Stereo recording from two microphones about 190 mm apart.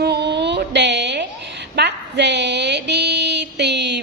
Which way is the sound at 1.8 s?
65° right (ahead or behind).